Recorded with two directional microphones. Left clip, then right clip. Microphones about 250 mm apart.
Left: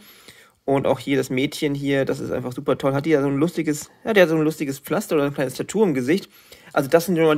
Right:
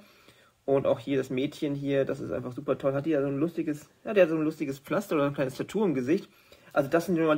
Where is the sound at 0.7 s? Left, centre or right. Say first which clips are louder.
Left 5 dB; left.